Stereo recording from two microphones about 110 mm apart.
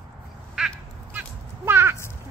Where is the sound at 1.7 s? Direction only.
20° right (ahead or behind).